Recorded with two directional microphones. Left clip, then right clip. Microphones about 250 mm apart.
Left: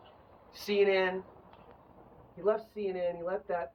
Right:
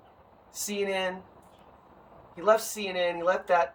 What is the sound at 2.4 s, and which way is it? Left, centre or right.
Speech, centre.